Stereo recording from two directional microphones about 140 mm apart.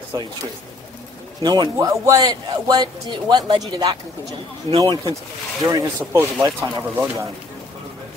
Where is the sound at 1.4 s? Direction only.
30° right (ahead or behind).